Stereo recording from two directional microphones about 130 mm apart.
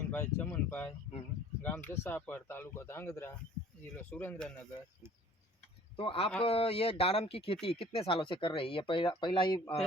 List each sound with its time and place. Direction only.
0.0 s a sound: 15° left (ahead or behind)
0.5 s speech: 15° left (ahead or behind)
6.0 s speech: 45° left (ahead or behind)